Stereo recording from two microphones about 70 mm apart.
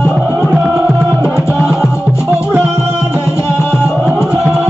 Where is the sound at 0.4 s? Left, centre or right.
Centre.